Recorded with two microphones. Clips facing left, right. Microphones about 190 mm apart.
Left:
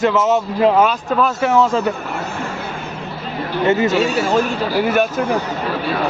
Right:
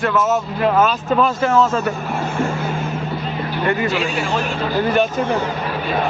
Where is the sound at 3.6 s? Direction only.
20° left (ahead or behind).